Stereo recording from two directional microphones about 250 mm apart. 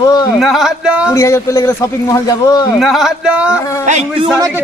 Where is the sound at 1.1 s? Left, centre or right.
Centre.